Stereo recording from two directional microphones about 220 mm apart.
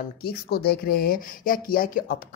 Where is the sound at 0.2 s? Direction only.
45° left (ahead or behind).